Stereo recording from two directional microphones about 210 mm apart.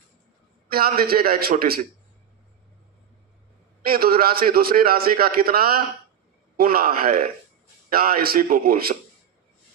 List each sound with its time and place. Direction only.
0.7 s a man's voice: 45° right (ahead or behind)
3.8 s a man's voice: 45° right (ahead or behind)